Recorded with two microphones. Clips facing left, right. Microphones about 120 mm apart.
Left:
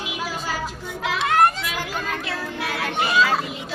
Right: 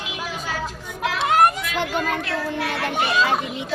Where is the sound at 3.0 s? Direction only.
20° right (ahead or behind).